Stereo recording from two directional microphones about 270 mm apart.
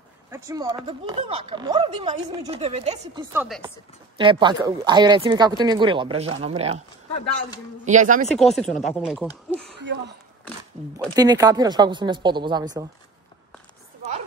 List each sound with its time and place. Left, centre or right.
0.3 s speech: centre
3.3 s speech: centre
4.2 s speech: centre
7.8 s speech: right
8.4 s speech: centre
9.5 s a sound: centre
9.8 s speech: right
11.1 s speech: centre